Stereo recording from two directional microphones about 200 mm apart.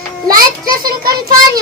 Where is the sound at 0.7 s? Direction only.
45° right (ahead or behind).